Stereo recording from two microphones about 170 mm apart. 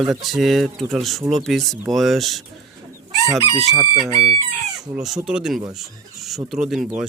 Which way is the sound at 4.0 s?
35° right (ahead or behind).